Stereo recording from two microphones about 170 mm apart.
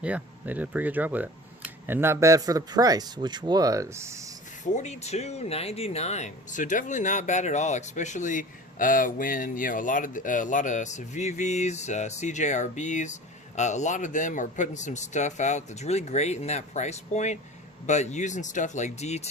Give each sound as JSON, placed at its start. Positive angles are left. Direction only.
{"t": 0.0, "sound": "speech", "side_deg": -10}
{"t": 4.6, "sound": "speech", "side_deg": 45}